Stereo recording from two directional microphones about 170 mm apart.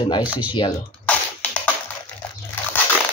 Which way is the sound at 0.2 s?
10° right (ahead or behind).